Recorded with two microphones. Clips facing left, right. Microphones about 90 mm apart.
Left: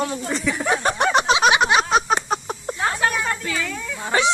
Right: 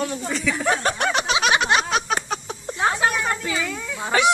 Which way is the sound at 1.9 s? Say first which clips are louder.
Left 4 dB; 40° left (ahead or behind).